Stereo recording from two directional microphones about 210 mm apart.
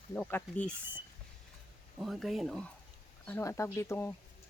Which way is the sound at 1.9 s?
Centre (ahead or behind).